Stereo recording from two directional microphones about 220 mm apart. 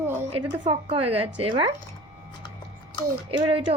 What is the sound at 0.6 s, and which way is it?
Speech, 25° right (ahead or behind).